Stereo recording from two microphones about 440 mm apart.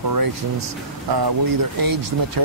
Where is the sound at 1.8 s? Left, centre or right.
Right.